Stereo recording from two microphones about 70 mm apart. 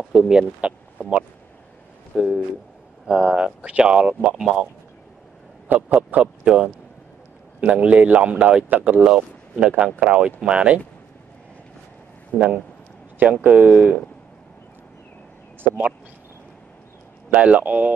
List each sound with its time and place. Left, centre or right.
0.0 s speech: centre
2.1 s speech: centre
3.1 s speech: centre
5.7 s a man's voice: right
6.4 s a man's voice: centre
12.3 s speech: left
13.2 s a man's voice: right
17.3 s a man's voice: centre